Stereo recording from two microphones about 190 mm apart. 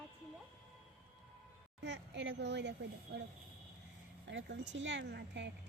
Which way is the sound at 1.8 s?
65° right (ahead or behind).